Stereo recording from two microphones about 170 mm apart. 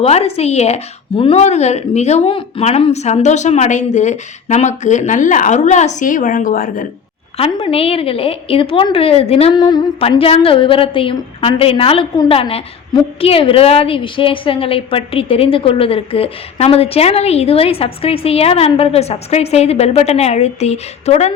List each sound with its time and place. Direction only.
0.0 s a woman's voice: 35° left (ahead or behind); by 6.8 s 55° left (ahead or behind)
7.6 s a woman's voice: 35° left (ahead or behind)